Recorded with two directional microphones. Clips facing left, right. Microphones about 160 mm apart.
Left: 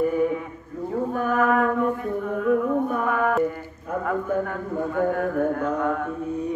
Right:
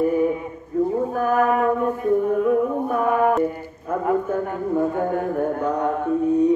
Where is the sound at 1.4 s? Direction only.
25° right (ahead or behind).